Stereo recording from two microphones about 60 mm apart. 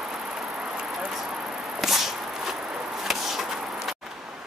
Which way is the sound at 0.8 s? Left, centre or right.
Centre.